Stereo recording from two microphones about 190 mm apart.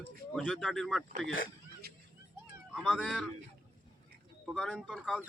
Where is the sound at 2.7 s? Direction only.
Centre (ahead or behind).